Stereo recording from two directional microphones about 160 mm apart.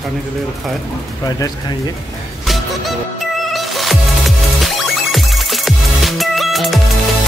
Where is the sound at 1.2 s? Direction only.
20° left (ahead or behind).